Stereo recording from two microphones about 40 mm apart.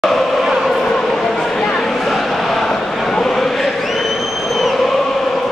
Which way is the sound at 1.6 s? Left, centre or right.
Left.